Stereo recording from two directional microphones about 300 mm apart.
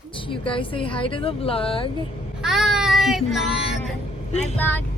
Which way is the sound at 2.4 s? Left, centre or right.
Centre.